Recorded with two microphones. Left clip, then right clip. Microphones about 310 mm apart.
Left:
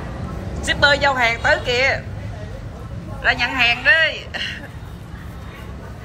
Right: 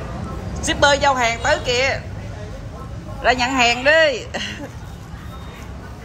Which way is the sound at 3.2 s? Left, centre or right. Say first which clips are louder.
Right 1 dB; centre.